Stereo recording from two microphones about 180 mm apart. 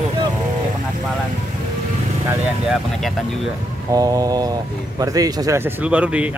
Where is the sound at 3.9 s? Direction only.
20° right (ahead or behind).